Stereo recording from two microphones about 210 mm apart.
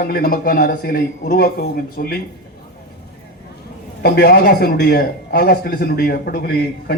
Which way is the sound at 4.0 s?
50° left (ahead or behind).